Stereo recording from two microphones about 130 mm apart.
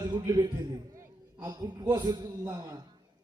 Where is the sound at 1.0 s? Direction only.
25° right (ahead or behind).